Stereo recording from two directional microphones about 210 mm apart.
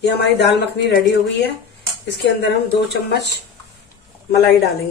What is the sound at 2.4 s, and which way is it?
Speech, 50° left (ahead or behind).